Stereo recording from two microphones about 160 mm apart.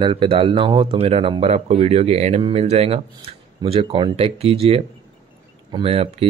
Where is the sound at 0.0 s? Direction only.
30° right (ahead or behind).